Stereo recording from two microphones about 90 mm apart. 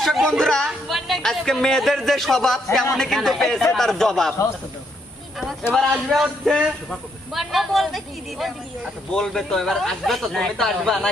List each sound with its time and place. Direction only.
0.0 s speech: centre (ahead or behind)
5.7 s speech: centre (ahead or behind)